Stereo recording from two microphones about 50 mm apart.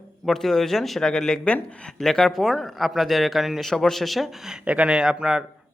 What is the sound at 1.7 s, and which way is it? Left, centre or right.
Speech, left.